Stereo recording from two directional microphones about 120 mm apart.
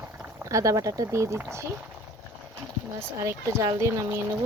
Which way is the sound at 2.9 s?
20° right (ahead or behind).